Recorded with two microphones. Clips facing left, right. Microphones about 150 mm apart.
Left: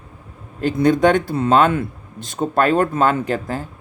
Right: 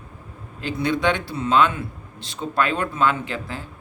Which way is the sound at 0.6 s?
45° left (ahead or behind).